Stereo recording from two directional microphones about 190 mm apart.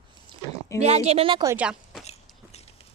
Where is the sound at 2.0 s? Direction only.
35° left (ahead or behind).